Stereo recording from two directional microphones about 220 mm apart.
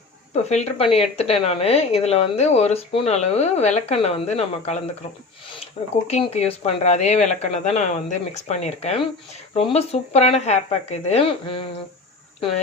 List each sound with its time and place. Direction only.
0.3 s a woman's voice: 30° left (ahead or behind)
6.1 s a woman's voice: 30° left (ahead or behind)